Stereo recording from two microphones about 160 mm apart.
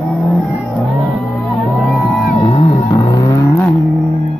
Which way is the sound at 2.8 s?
20° left (ahead or behind).